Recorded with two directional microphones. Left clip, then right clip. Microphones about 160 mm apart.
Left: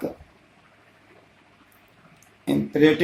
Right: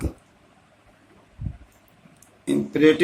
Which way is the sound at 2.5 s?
55° left (ahead or behind).